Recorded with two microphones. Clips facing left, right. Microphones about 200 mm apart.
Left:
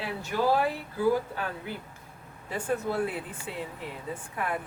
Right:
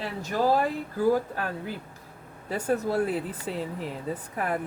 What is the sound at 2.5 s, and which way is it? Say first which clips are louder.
Speech: right 3 dB; 40° right (ahead or behind).